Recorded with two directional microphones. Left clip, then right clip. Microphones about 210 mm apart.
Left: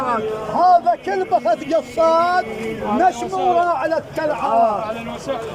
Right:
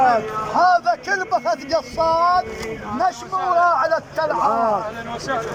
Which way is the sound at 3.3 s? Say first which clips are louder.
Even; 45° left (ahead or behind).